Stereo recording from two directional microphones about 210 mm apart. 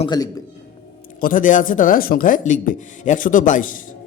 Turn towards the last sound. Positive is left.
turn(degrees=40)  # may be behind; listen again after turning